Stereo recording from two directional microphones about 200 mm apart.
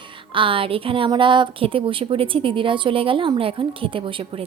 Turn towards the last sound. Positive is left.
turn(degrees=-25)  # may be behind; listen again after turning